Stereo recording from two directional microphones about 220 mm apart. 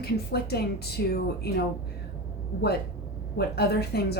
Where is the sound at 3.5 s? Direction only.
45° left (ahead or behind).